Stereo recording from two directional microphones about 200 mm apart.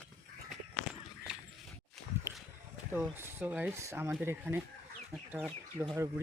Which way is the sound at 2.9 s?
10° right (ahead or behind).